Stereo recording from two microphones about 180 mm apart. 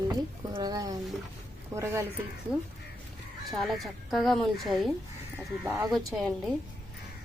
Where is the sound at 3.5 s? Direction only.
Centre (ahead or behind).